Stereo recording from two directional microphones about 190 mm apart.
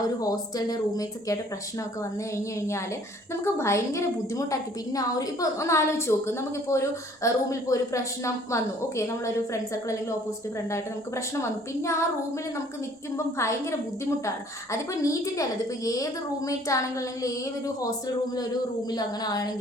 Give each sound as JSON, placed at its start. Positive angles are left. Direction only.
{"t": 0.2, "sound": "a woman's voice", "side_deg": 20}
{"t": 11.3, "sound": "a woman's voice", "side_deg": 15}
{"t": 13.1, "sound": "a woman's voice", "side_deg": 15}
{"t": 18.9, "sound": "speech", "side_deg": 20}